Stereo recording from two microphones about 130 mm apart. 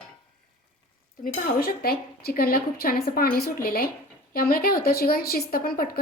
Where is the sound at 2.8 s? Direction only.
90° left.